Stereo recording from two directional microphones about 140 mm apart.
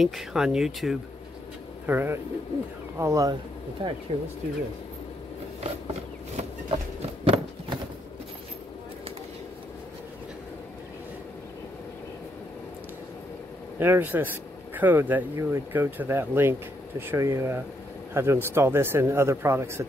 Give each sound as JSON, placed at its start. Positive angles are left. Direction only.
{"t": 0.0, "sound": "speech", "side_deg": 0}
{"t": 1.9, "sound": "speech", "side_deg": -15}
{"t": 3.8, "sound": "speech", "side_deg": -35}
{"t": 6.3, "sound": "horse", "side_deg": -45}
{"t": 13.7, "sound": "speech", "side_deg": -15}